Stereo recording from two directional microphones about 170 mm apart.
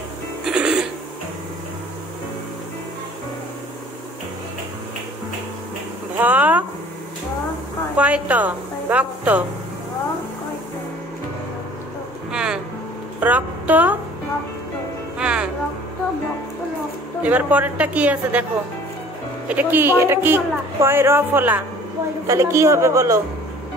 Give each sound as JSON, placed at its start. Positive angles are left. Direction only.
{"t": 0.5, "sound": "music", "side_deg": -5}
{"t": 6.2, "sound": "a sound", "side_deg": -10}
{"t": 7.9, "sound": "a woman's voice", "side_deg": -10}
{"t": 12.3, "sound": "music", "side_deg": -5}
{"t": 13.2, "sound": "a woman's voice", "side_deg": -10}
{"t": 15.1, "sound": "music", "side_deg": -5}
{"t": 17.2, "sound": "speech", "side_deg": -10}
{"t": 19.4, "sound": "speech", "side_deg": -10}